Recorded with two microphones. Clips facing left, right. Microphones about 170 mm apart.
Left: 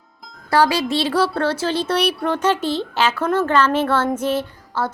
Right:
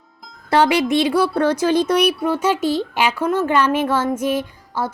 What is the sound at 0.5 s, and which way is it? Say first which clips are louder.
Speech: right 2 dB; 20° right (ahead or behind).